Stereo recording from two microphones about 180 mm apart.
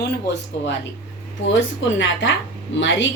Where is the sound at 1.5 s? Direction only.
90° left.